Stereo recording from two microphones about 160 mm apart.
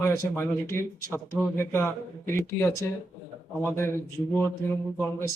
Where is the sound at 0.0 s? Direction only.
15° left (ahead or behind).